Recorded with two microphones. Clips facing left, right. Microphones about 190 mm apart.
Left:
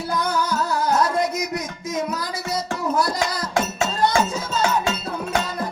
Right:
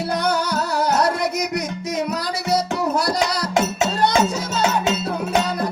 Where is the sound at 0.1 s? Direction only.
70° right (ahead or behind).